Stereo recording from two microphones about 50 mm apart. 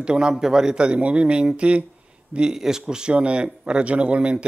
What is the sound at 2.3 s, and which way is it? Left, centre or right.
A man's voice, centre.